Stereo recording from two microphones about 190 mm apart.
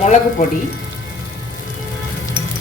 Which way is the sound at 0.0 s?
40° left (ahead or behind).